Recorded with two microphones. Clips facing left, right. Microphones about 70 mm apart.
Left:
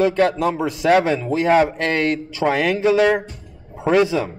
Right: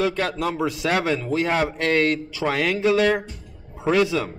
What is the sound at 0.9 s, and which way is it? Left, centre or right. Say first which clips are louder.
Speech: left 5 dB; left.